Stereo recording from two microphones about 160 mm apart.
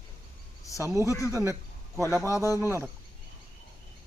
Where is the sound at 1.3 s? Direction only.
15° right (ahead or behind).